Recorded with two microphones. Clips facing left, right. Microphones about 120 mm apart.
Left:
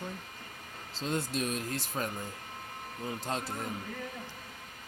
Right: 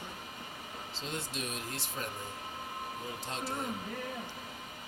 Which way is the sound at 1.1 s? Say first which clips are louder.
Left 7 dB; 40° left (ahead or behind).